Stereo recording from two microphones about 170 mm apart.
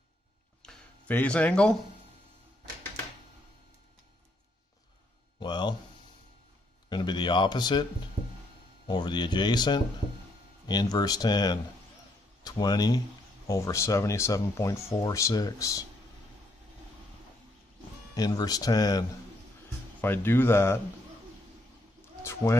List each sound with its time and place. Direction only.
0.6 s a sound: 5° left (ahead or behind)
5.4 s a sound: 25° left (ahead or behind)
6.9 s speech: 25° left (ahead or behind)
8.8 s speech: 25° left (ahead or behind)
18.1 s speech: 20° left (ahead or behind)
20.0 s speech: 10° left (ahead or behind)
22.2 s speech: 15° left (ahead or behind)